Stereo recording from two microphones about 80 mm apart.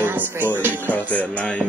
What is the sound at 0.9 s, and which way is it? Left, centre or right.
Music, centre.